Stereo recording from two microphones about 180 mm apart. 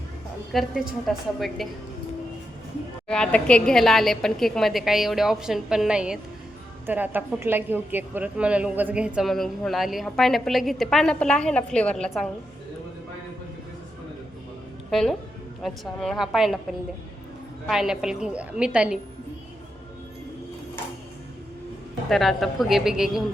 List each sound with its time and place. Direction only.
0.5 s a woman's voice: centre (ahead or behind)
3.1 s a woman's voice: 5° left (ahead or behind)
14.8 s a woman's voice: centre (ahead or behind)
17.7 s a woman's voice: 5° right (ahead or behind)
22.1 s a woman's voice: centre (ahead or behind)